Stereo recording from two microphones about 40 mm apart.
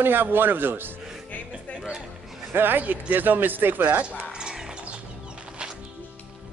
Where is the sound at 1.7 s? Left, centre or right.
Centre.